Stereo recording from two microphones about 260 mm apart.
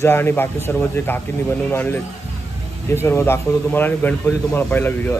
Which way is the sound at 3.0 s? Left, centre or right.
Centre.